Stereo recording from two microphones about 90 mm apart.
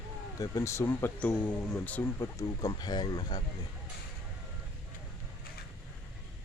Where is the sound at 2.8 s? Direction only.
50° left (ahead or behind).